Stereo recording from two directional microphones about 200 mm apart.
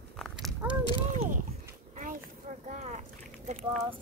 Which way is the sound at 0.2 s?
Centre (ahead or behind).